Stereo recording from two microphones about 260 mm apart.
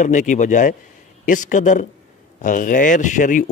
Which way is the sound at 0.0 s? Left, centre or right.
Left.